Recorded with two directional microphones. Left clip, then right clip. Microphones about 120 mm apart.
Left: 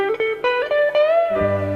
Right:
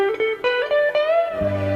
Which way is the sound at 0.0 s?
40° left (ahead or behind).